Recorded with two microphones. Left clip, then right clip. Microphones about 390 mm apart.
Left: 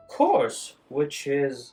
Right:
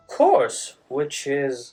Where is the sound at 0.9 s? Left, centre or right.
Centre.